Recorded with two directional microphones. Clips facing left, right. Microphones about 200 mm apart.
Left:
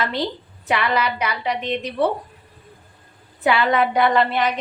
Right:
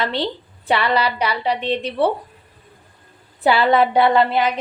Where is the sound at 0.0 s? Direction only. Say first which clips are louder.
Right 1 dB; 30° right (ahead or behind).